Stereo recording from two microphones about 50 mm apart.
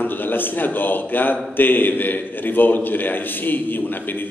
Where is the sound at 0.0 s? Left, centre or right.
Left.